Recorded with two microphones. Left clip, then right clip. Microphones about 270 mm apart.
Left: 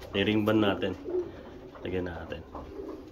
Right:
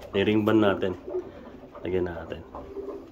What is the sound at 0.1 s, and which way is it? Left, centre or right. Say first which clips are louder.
Speech: right 4 dB; right.